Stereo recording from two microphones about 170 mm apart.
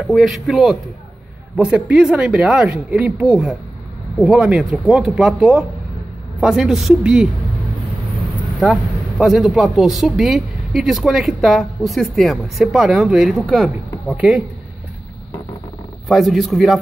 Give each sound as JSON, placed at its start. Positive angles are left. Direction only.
{"t": 0.0, "sound": "speech", "side_deg": 0}
{"t": 9.2, "sound": "speech", "side_deg": 0}
{"t": 16.1, "sound": "speech", "side_deg": 0}